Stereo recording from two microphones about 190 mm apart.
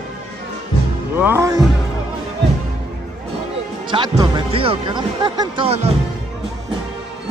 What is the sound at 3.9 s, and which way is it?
Speech, 25° right (ahead or behind).